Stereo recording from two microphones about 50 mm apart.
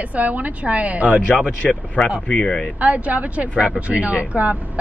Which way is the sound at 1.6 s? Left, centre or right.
Centre.